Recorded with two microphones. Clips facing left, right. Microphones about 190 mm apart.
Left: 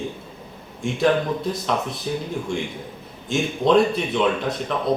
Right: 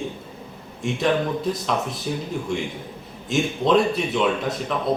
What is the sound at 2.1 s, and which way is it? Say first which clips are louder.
Speech: left 2 dB; centre (ahead or behind).